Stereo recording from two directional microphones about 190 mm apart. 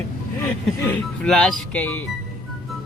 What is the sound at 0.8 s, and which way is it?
Speech, 5° left (ahead or behind).